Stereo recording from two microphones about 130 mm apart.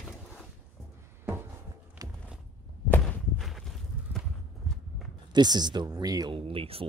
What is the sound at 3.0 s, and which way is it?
Walk, centre (ahead or behind).